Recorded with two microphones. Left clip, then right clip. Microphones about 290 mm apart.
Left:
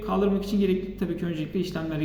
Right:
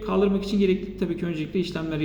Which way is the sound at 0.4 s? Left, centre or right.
Centre.